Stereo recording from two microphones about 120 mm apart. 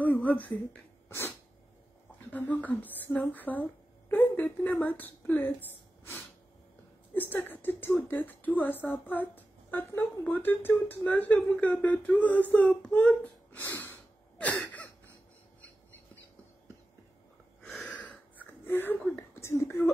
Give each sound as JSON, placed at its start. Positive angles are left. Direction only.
{"t": 0.0, "sound": "a sound", "side_deg": 15}
{"t": 1.0, "sound": "sneeze", "side_deg": 20}
{"t": 2.3, "sound": "speech", "side_deg": 15}
{"t": 14.4, "sound": "a sound", "side_deg": 10}
{"t": 17.6, "sound": "gasp", "side_deg": 0}
{"t": 19.3, "sound": "speech", "side_deg": 25}